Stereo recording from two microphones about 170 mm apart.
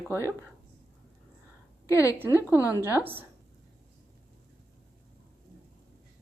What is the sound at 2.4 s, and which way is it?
Speech, 20° left (ahead or behind).